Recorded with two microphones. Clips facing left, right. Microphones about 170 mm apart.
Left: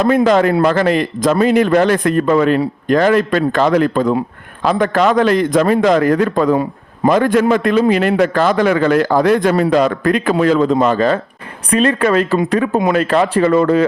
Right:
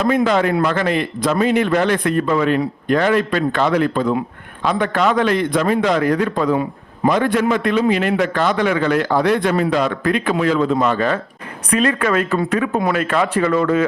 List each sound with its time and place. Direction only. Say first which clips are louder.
0.0 s a man's voice: left 4 dB; 40° left (ahead or behind)